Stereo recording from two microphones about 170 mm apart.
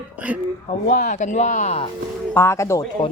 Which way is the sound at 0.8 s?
50° left (ahead or behind).